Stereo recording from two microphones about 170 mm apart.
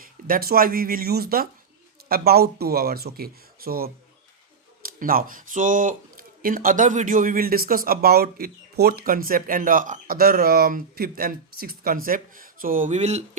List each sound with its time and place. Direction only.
0.0 s speech: 60° right (ahead or behind); by 13.2 s 40° right (ahead or behind)